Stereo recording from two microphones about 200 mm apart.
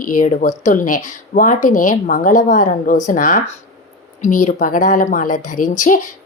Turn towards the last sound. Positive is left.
turn(degrees=40)  # may be behind; listen again after turning